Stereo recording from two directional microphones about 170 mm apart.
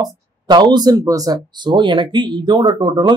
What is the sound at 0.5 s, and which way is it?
Speech, 25° right (ahead or behind).